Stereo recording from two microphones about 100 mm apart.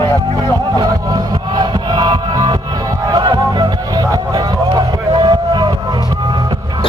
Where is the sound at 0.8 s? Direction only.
40° right (ahead or behind).